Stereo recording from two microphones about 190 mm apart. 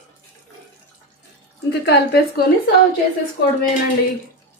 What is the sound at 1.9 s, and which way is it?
Speech, 55° left (ahead or behind).